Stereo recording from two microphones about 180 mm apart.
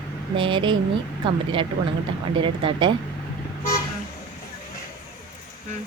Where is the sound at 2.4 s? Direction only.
25° right (ahead or behind).